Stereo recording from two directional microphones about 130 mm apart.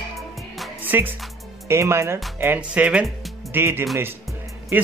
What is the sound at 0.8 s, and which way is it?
Music, 15° right (ahead or behind).